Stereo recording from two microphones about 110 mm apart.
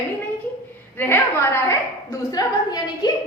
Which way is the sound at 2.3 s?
35° left (ahead or behind).